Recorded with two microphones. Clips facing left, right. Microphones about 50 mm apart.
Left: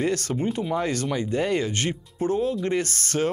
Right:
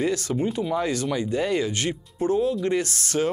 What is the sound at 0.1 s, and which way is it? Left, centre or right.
Speech, left.